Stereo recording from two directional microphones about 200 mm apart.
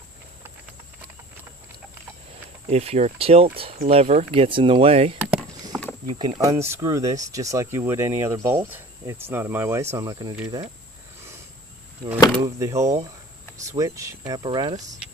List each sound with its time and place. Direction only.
2.6 s speech: 30° right (ahead or behind)
5.2 s a sound: 5° right (ahead or behind)
6.1 s speech: 25° right (ahead or behind)
12.4 s speech: 15° right (ahead or behind)